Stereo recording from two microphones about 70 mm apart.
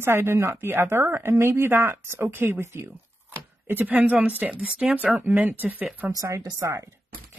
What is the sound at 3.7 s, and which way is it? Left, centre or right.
Speech, right.